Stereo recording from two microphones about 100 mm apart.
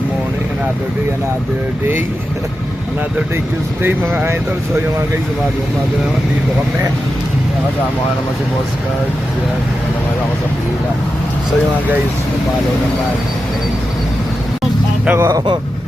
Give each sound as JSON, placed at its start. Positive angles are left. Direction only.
{"t": 3.8, "sound": "speech", "side_deg": -20}
{"t": 15.0, "sound": "speech", "side_deg": -20}